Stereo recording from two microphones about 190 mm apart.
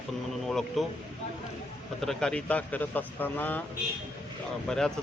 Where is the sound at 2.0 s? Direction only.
5° left (ahead or behind).